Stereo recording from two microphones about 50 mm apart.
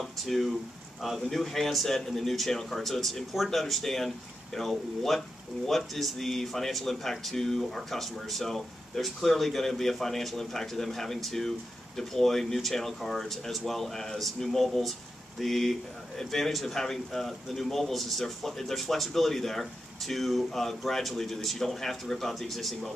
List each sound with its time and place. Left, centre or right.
0.2 s a man's voice: centre